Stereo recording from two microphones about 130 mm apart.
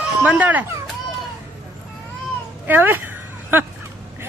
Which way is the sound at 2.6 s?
15° right (ahead or behind).